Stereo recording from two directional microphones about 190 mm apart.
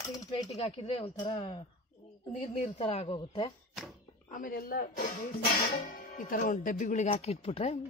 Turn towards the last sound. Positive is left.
turn(degrees=35)  # may be behind; listen again after turning